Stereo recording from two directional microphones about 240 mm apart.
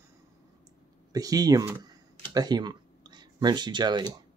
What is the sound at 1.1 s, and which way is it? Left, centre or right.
Speech, centre.